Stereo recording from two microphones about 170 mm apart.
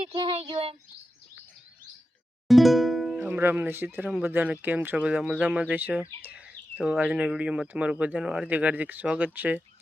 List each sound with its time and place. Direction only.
0.1 s speech: 30° right (ahead or behind)
2.5 s music: centre (ahead or behind)
3.2 s speech: 10° right (ahead or behind)